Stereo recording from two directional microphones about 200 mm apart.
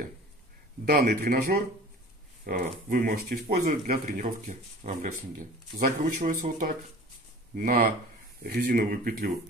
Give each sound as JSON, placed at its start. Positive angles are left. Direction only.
{"t": 0.8, "sound": "speech", "side_deg": -50}